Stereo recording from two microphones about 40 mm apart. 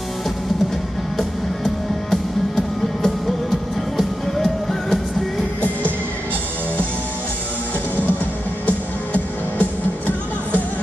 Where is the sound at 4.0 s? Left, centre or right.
Centre.